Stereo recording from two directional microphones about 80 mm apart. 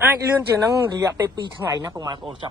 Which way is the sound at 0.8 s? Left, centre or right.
Right.